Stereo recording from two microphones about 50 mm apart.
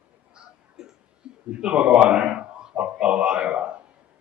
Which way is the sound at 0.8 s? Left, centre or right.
Centre.